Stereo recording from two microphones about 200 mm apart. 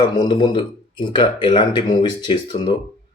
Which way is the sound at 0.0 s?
20° left (ahead or behind).